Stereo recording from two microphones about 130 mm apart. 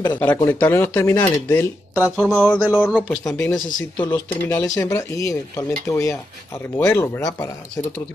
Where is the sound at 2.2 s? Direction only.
5° left (ahead or behind).